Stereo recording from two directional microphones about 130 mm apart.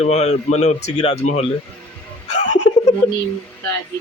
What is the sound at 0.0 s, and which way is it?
Speech, 60° left (ahead or behind).